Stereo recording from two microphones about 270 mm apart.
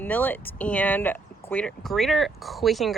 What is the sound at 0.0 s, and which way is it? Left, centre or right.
Speech, centre.